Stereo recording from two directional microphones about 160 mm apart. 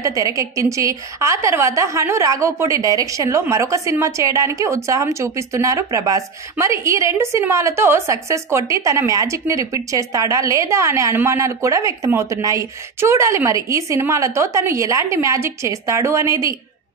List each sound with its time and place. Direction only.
0.0 s a woman's voice: 20° right (ahead or behind)